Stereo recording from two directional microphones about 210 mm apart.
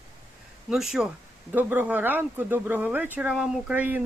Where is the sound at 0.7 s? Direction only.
Centre (ahead or behind).